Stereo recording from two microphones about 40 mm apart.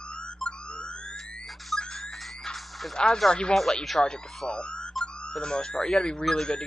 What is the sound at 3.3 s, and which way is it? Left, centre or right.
Speech, left.